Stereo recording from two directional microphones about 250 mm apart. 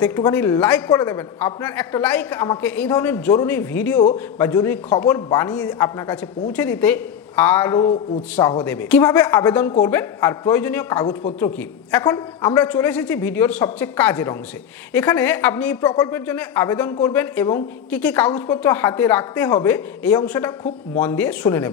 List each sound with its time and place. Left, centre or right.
0.0 s speech: centre
8.6 s speech: centre